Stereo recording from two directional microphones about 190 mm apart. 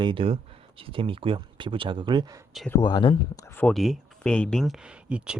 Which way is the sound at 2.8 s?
25° left (ahead or behind).